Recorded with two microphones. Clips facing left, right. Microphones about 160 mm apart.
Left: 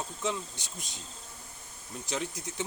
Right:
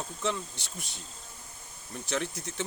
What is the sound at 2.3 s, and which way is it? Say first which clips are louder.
Speech: right 1 dB; 15° left (ahead or behind).